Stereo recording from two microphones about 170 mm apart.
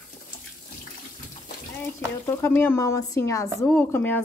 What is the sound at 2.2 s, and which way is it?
Speech, 15° left (ahead or behind).